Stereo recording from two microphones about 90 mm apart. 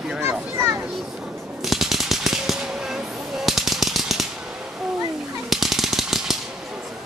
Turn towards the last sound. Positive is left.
turn(degrees=-5)  # may be behind; listen again after turning